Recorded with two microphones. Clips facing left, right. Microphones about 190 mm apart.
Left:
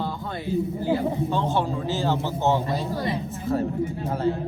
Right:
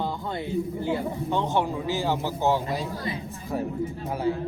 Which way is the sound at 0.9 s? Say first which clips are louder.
Left 4 dB; 25° left (ahead or behind).